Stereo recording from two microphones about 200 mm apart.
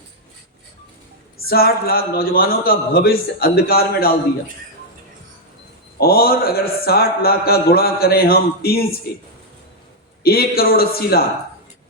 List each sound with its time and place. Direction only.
1.5 s speech: 50° left (ahead or behind)
6.0 s speech: 50° left (ahead or behind)
10.2 s speech: 50° left (ahead or behind)